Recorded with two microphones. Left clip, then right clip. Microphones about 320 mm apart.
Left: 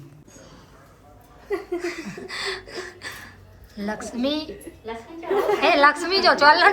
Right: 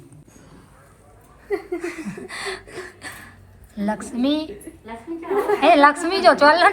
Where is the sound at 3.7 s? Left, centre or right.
Centre.